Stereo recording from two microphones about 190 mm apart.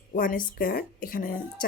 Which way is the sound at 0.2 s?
45° left (ahead or behind).